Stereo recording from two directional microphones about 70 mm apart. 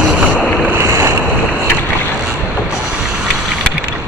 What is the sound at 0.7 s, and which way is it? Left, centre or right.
Boat, right.